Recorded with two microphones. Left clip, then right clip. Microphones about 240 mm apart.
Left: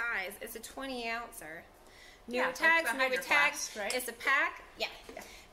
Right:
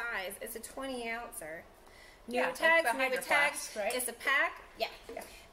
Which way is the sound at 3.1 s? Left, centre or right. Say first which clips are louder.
Left 1 dB; centre.